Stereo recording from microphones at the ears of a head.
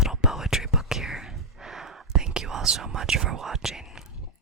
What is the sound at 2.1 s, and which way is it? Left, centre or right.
Whispering, right.